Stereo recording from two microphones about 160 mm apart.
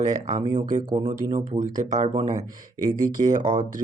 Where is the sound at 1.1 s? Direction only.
55° right (ahead or behind).